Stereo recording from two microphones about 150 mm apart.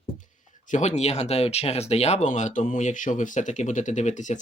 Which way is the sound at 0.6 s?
50° left (ahead or behind).